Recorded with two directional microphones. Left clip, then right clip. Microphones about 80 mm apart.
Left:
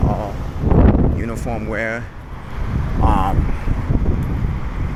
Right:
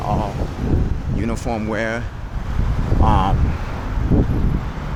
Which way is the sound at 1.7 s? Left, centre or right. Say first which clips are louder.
Left 1 dB; right.